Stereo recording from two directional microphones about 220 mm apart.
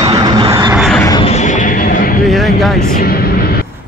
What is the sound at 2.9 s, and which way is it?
Vehicle, 45° left (ahead or behind).